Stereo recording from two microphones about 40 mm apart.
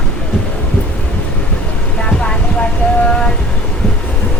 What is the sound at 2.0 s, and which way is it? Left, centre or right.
Vehicle, left.